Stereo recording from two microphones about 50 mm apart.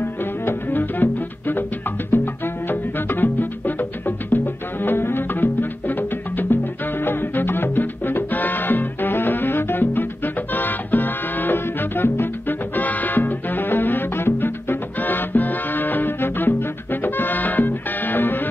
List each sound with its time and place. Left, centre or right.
0.0 s music: left